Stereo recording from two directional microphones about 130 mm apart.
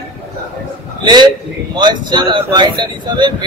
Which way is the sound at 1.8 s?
35° right (ahead or behind).